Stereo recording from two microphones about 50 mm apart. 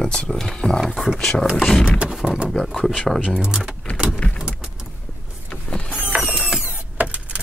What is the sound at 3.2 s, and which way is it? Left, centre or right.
Speech, centre.